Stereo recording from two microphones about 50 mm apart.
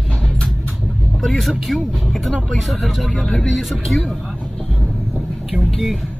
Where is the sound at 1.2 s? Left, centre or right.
Centre.